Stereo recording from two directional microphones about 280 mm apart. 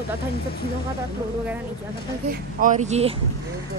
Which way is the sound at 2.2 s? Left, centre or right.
Right.